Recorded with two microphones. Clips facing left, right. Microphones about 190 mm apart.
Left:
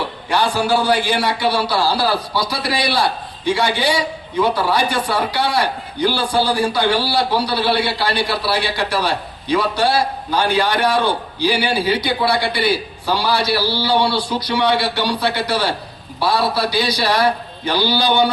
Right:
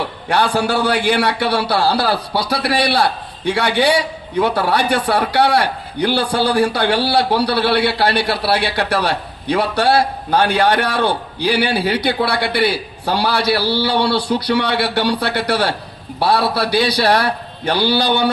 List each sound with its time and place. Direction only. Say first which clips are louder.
0.3 s a man's voice: right 1 dB; 60° right (ahead or behind)